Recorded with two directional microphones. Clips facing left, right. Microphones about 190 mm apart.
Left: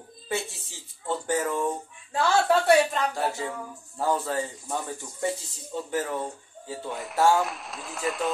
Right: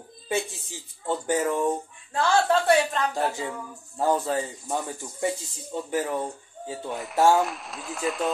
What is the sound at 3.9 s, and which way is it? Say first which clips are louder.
Speech: right 2 dB; 15° right (ahead or behind).